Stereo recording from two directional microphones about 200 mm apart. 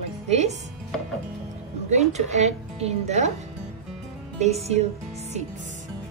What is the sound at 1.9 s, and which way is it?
A woman's voice, 35° right (ahead or behind).